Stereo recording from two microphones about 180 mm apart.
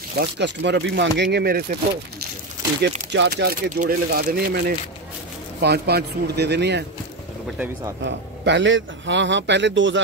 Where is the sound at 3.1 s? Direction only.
75° right (ahead or behind).